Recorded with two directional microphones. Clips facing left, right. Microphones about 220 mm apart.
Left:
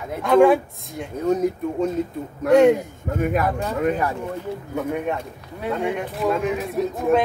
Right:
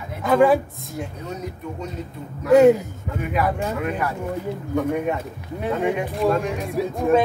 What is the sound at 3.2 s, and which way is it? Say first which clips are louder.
Speech: left 2 dB; 45° left (ahead or behind).